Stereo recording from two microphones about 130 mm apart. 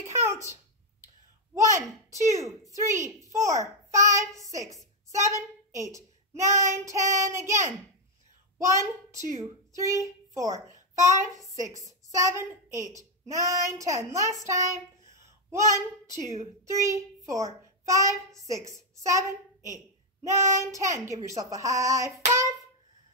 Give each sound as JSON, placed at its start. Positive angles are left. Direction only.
{"t": 0.0, "sound": "a sound", "side_deg": -20}
{"t": 1.5, "sound": "a child's voice", "side_deg": -25}
{"t": 17.8, "sound": "child singing", "side_deg": -25}
{"t": 18.3, "sound": "a child's voice", "side_deg": -25}
{"t": 22.3, "sound": "hands", "side_deg": -25}